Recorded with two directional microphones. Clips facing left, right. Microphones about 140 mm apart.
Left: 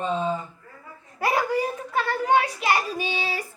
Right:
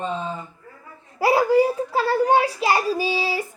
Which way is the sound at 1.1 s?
30° right (ahead or behind).